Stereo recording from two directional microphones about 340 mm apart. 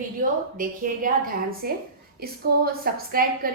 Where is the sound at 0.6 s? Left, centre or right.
Right.